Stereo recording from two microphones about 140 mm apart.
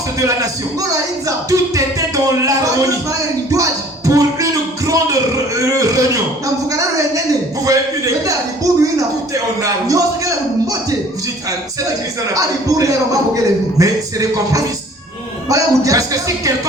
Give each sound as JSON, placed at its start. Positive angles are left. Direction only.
{"t": 0.2, "sound": "a man's voice", "side_deg": -25}
{"t": 1.5, "sound": "music", "side_deg": -25}
{"t": 3.1, "sound": "a sound", "side_deg": -25}
{"t": 12.3, "sound": "a man's voice", "side_deg": -25}